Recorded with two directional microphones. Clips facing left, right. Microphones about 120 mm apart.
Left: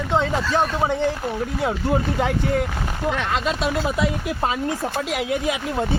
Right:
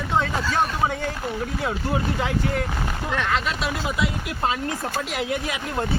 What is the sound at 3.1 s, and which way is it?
Speech, 15° left (ahead or behind).